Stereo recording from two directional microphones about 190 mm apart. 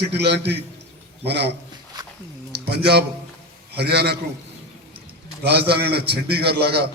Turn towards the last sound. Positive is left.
turn(degrees=-55)  # may be behind; listen again after turning